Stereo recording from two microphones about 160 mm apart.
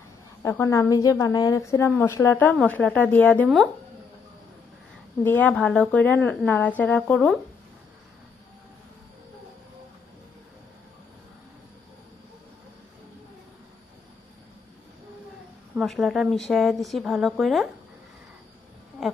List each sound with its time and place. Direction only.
0.4 s a woman's voice: 20° left (ahead or behind)
5.2 s a woman's voice: 10° left (ahead or behind)
15.8 s a woman's voice: centre (ahead or behind)
19.0 s insect: centre (ahead or behind)